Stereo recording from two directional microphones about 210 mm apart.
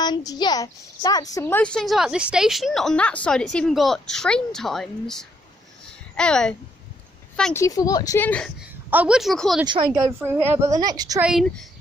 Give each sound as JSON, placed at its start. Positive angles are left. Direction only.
{"t": 0.0, "sound": "a child's voice", "side_deg": 20}
{"t": 7.6, "sound": "speech", "side_deg": 15}
{"t": 8.9, "sound": "a child's voice", "side_deg": -5}
{"t": 10.0, "sound": "a woman's voice", "side_deg": -10}
{"t": 11.2, "sound": "a child's voice", "side_deg": 0}